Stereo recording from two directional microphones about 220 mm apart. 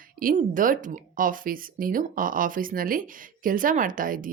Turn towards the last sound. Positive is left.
turn(degrees=-40)  # may be behind; listen again after turning